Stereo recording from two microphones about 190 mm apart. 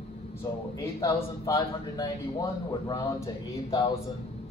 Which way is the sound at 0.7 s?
20° left (ahead or behind).